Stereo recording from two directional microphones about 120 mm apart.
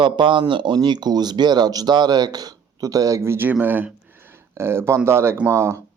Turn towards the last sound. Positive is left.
turn(degrees=-25)  # may be behind; listen again after turning